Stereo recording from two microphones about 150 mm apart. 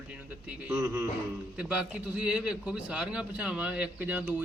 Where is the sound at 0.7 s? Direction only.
15° right (ahead or behind).